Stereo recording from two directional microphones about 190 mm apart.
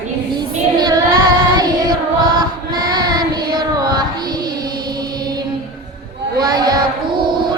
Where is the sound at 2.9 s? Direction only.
20° right (ahead or behind).